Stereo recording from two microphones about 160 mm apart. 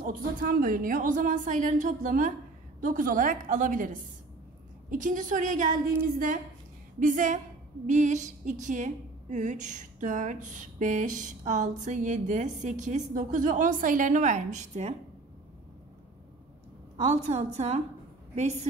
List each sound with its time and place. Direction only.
0.0 s a woman's voice: 60° right (ahead or behind)
16.9 s a woman's voice: 45° right (ahead or behind)